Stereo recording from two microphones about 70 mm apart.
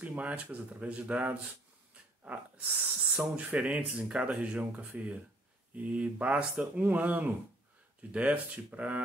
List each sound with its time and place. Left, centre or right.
0.0 s speech: right